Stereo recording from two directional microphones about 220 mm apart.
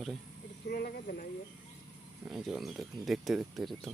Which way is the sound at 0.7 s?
45° left (ahead or behind).